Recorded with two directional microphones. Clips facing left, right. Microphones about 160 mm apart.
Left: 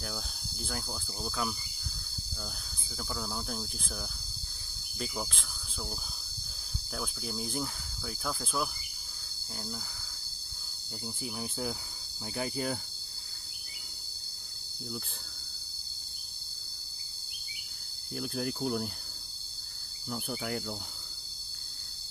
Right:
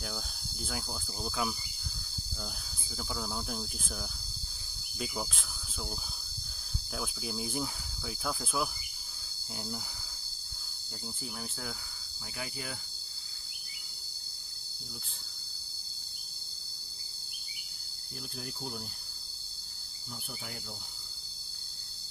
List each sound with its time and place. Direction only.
0.0 s cricket: centre (ahead or behind)
3.0 s cricket: centre (ahead or behind)
4.9 s speech: 5° right (ahead or behind)
6.9 s cricket: centre (ahead or behind)
11.2 s speech: 15° left (ahead or behind)
12.4 s cricket: 40° left (ahead or behind)
18.2 s cricket: 70° left (ahead or behind)
20.1 s cricket: 65° left (ahead or behind)